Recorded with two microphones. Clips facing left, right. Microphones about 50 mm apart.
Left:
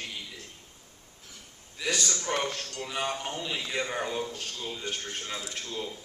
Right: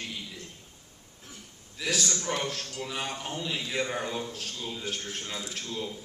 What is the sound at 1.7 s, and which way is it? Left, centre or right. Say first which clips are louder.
Speech: even; centre.